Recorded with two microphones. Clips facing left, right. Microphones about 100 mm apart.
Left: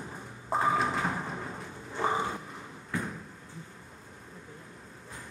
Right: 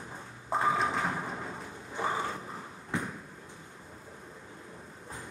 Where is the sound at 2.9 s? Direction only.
20° right (ahead or behind).